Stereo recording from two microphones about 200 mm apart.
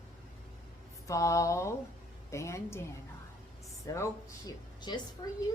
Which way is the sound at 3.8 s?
15° left (ahead or behind).